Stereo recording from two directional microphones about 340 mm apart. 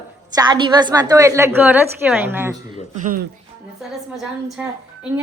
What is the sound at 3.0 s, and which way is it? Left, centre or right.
Speech, right.